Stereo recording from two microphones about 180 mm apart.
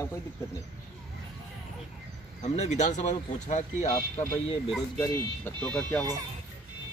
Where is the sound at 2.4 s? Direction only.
40° left (ahead or behind).